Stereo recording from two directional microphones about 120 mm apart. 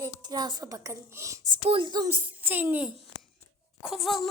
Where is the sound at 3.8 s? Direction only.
Centre (ahead or behind).